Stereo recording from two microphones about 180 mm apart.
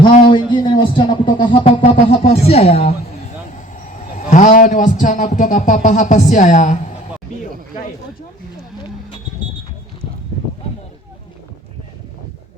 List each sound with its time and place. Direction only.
0.2 s a woman's voice: 25° left (ahead or behind)
3.8 s a man's voice: 45° left (ahead or behind)